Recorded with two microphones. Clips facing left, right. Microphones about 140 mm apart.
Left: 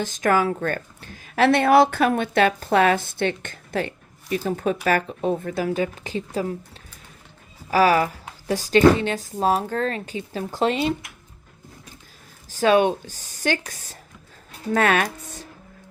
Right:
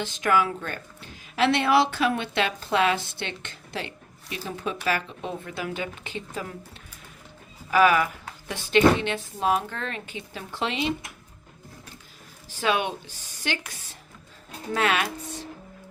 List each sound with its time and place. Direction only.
0.0 s a woman's voice: 45° left (ahead or behind)
7.7 s speech: 35° left (ahead or behind)
12.5 s a woman's voice: 40° left (ahead or behind)